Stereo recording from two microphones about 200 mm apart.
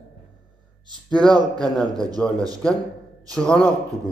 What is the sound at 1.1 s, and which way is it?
Speech, 5° left (ahead or behind).